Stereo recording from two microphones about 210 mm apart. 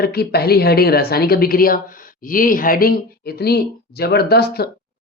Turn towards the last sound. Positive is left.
turn(degrees=50)  # may be behind; listen again after turning